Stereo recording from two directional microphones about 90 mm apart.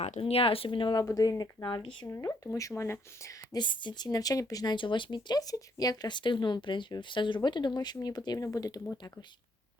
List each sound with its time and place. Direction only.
0.2 s speech: 90° left; by 1.0 s 65° left (ahead or behind)
1.0 s speech: 40° left (ahead or behind)
1.6 s speech: 60° left (ahead or behind)
2.1 s speech: 35° left (ahead or behind)
3.5 s speech: 60° left (ahead or behind); by 8.8 s 40° left (ahead or behind)